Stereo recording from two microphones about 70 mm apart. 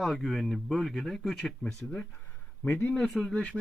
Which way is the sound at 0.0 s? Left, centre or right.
Centre.